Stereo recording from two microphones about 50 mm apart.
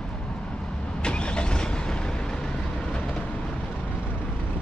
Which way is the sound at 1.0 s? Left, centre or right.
Centre.